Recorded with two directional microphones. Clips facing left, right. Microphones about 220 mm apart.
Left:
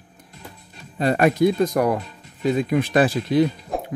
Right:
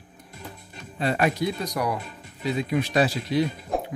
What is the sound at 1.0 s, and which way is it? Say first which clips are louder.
Speech: left 7 dB; 45° left (ahead or behind).